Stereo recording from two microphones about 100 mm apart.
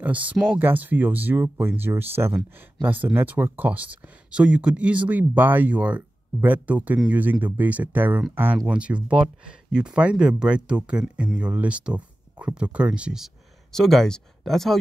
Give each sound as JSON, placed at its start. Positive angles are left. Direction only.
{"t": 0.0, "sound": "speech", "side_deg": -15}